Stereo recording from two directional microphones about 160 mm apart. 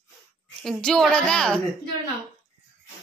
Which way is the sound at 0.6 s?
5° left (ahead or behind).